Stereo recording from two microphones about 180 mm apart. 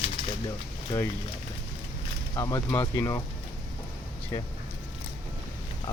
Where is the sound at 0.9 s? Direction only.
15° left (ahead or behind).